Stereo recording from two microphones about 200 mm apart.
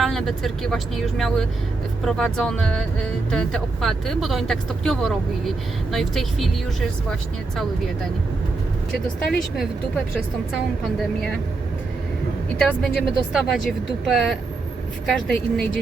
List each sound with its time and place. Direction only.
0.0 s speech: centre (ahead or behind)
12.5 s speech: 5° left (ahead or behind)